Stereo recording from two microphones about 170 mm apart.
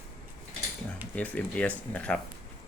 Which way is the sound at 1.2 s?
10° left (ahead or behind).